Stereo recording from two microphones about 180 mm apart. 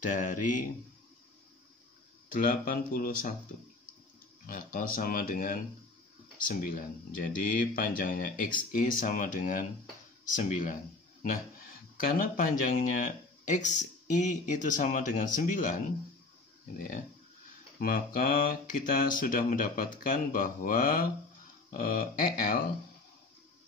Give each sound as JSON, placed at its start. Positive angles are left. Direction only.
{"t": 0.0, "sound": "speech", "side_deg": 45}
{"t": 2.3, "sound": "speech", "side_deg": 50}
{"t": 4.5, "sound": "speech", "side_deg": 50}
{"t": 12.0, "sound": "speech", "side_deg": 50}
{"t": 17.7, "sound": "speech", "side_deg": 50}